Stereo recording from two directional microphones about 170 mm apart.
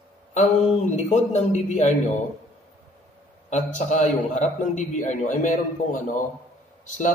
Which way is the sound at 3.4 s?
45° left (ahead or behind).